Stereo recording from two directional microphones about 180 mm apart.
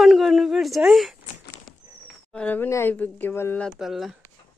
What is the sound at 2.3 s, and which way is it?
Speech, 5° left (ahead or behind).